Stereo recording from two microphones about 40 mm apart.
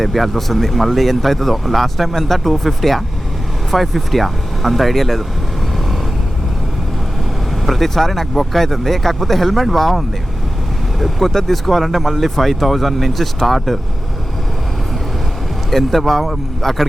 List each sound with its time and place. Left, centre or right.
0.0 s speech: centre
7.6 s speech: centre
11.0 s speech: centre
15.7 s speech: centre